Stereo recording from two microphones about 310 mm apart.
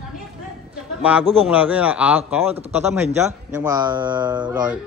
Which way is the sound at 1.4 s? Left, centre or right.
Centre.